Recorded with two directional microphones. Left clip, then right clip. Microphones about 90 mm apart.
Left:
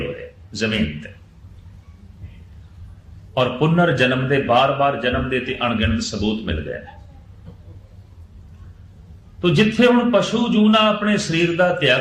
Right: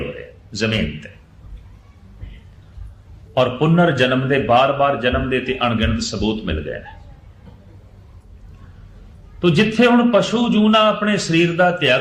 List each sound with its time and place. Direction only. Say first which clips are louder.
0.5 s a man's voice: right 1 dB; 30° left (ahead or behind)
3.3 s a man's voice: right 2 dB; 25° left (ahead or behind)
9.4 s a man's voice: right 1 dB; 20° left (ahead or behind)